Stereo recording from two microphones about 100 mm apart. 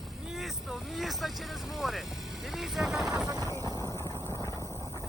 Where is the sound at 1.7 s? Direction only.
Centre (ahead or behind).